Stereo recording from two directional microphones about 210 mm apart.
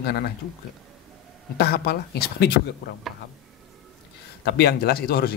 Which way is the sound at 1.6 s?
50° left (ahead or behind).